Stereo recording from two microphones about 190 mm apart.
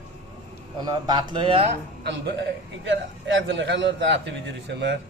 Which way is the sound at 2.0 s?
65° right (ahead or behind).